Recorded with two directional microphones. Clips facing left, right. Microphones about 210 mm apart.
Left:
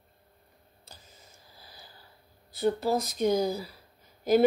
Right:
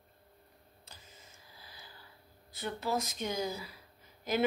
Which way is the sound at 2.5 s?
35° left (ahead or behind).